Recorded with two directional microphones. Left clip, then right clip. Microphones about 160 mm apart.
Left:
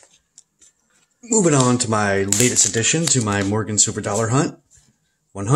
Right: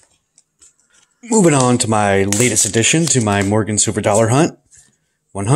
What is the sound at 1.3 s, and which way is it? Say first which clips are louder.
Speech: right 4 dB; 25° right (ahead or behind).